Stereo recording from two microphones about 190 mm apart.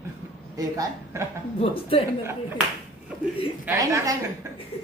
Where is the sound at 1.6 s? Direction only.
30° left (ahead or behind).